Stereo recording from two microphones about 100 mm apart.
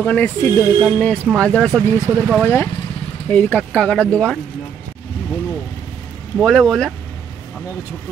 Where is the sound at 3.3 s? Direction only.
15° left (ahead or behind).